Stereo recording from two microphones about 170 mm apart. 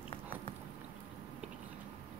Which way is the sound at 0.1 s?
30° left (ahead or behind).